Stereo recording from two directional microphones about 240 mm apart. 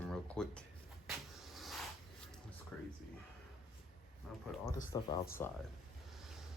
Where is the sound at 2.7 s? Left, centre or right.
Centre.